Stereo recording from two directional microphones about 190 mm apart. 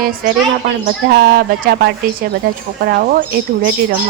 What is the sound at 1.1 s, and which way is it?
A woman's voice, 55° right (ahead or behind).